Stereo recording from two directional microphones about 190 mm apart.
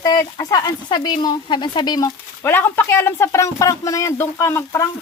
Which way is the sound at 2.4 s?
10° left (ahead or behind).